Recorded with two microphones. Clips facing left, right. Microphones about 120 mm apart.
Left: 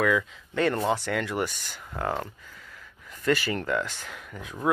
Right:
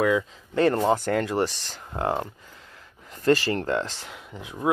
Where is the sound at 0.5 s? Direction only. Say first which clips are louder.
Right 4 dB; 35° right (ahead or behind).